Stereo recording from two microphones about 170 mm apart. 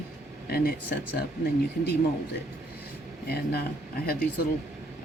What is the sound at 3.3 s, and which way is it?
Speech, 65° left (ahead or behind).